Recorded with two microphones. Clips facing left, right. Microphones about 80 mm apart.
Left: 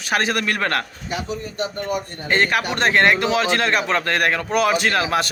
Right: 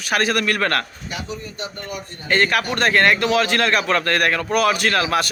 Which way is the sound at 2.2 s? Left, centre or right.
Centre.